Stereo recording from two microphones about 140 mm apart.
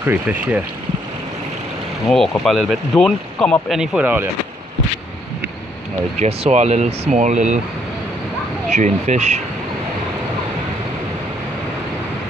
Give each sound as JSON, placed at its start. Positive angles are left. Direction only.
{"t": 0.0, "sound": "speech", "side_deg": -15}
{"t": 2.0, "sound": "speech", "side_deg": 0}
{"t": 3.7, "sound": "speech", "side_deg": -5}
{"t": 6.1, "sound": "speech", "side_deg": -50}
{"t": 8.7, "sound": "speech", "side_deg": -60}